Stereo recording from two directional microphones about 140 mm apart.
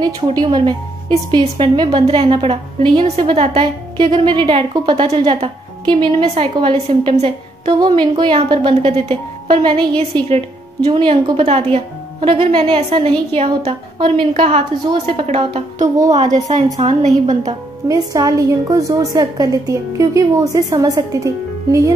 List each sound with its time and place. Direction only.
0.0 s a woman's voice: 30° right (ahead or behind); by 17.4 s 55° right (ahead or behind)
17.8 s a woman's voice: 25° right (ahead or behind)